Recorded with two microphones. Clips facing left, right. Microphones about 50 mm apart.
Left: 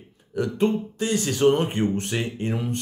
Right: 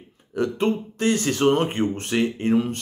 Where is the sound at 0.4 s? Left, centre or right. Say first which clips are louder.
Even; right.